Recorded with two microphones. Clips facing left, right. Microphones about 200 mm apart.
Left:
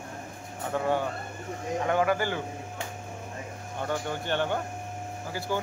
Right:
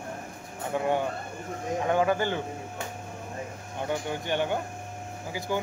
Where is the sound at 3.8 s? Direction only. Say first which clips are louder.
Right 1 dB; 15° right (ahead or behind).